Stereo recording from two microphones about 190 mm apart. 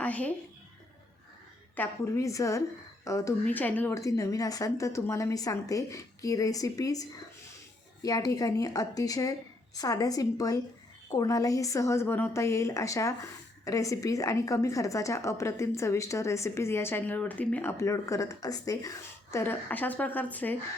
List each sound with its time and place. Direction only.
0.0 s a woman's voice: 5° left (ahead or behind)
1.7 s a woman's voice: 10° left (ahead or behind)